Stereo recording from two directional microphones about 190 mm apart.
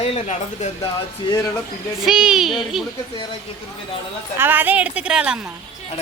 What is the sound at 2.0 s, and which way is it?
Speech, 5° right (ahead or behind).